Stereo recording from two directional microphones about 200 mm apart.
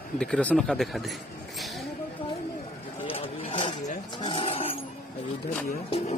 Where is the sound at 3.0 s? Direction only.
30° left (ahead or behind).